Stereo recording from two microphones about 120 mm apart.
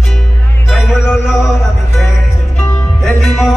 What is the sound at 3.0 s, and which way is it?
Music, centre (ahead or behind).